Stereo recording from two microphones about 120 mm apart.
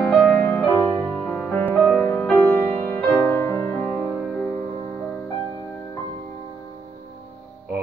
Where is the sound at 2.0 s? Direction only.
10° left (ahead or behind).